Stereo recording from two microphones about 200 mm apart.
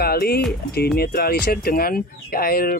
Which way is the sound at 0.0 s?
50° left (ahead or behind).